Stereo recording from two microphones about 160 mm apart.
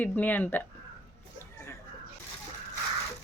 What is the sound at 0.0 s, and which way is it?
Speech, 10° left (ahead or behind).